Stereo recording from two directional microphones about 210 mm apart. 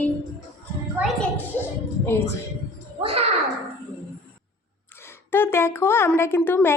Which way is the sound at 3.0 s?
25° right (ahead or behind).